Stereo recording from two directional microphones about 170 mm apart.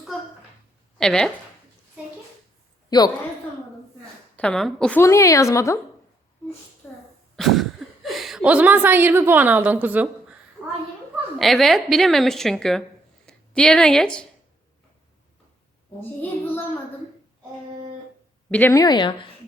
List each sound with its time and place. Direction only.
0.9 s a woman's voice: 5° left (ahead or behind)
2.9 s speech: 25° left (ahead or behind)
4.4 s a woman's voice: 5° left (ahead or behind)
5.0 s a woman's voice: 20° left (ahead or behind)
6.8 s sneeze: 10° left (ahead or behind)
7.3 s speech: centre (ahead or behind)
11.3 s a woman's voice: centre (ahead or behind)
18.5 s speech: 15° left (ahead or behind)